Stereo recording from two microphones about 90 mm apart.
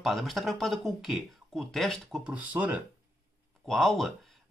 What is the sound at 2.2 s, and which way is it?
Speech, 15° right (ahead or behind).